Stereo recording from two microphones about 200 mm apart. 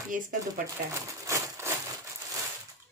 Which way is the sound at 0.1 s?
40° right (ahead or behind).